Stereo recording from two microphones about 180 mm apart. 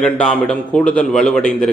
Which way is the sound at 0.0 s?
5° left (ahead or behind).